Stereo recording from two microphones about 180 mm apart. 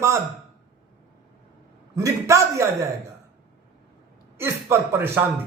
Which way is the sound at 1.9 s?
15° right (ahead or behind).